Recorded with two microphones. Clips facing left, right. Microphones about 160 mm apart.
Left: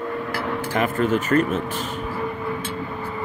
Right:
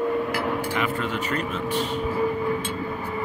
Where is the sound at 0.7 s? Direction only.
45° left (ahead or behind).